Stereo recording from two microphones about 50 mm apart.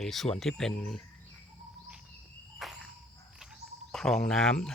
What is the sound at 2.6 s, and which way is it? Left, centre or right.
Cricket, centre.